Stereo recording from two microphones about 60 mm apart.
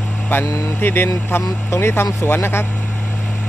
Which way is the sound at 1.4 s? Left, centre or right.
Left.